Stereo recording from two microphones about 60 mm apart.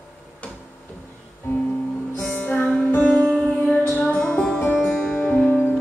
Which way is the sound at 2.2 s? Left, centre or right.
Left.